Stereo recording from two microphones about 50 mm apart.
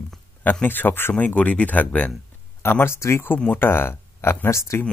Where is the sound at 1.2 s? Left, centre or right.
Left.